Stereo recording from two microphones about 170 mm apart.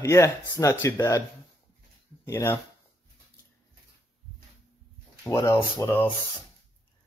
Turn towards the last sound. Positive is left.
turn(degrees=15)  # may be behind; listen again after turning